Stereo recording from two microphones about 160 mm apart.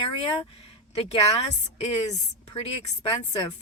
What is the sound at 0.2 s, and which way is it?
Speech, 35° left (ahead or behind).